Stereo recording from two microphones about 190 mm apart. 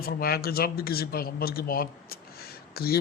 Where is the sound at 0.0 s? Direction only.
55° left (ahead or behind).